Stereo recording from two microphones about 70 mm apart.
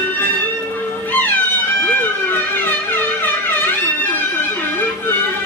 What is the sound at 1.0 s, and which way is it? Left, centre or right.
Cat, left.